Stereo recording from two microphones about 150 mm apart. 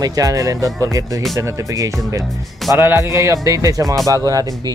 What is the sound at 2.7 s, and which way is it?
A man's voice, 15° right (ahead or behind).